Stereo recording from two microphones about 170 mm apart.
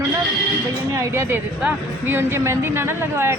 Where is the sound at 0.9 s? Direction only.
15° right (ahead or behind).